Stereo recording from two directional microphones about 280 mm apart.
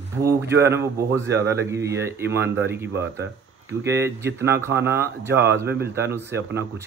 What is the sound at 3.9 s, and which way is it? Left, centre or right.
A man's voice, centre.